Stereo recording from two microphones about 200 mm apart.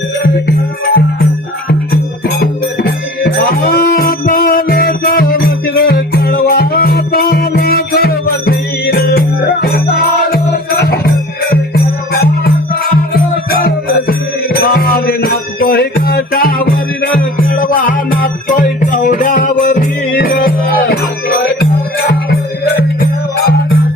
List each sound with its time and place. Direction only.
1.9 s music: 50° left (ahead or behind)